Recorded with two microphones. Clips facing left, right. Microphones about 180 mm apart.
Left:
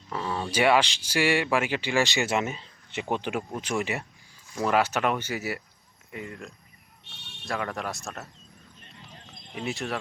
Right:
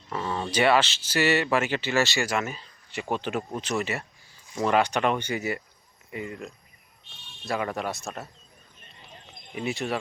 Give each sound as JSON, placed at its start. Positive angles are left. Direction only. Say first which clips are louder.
{"t": 0.1, "sound": "speech", "louder": "right 1 dB", "side_deg": 0}
{"t": 7.0, "sound": "a sound", "louder": "left 1 dB", "side_deg": 70}
{"t": 7.4, "sound": "speech", "louder": "right 3 dB", "side_deg": 0}
{"t": 9.3, "sound": "speech", "louder": "right 2 dB", "side_deg": 0}